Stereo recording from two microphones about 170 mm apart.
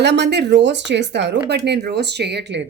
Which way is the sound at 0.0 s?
85° right.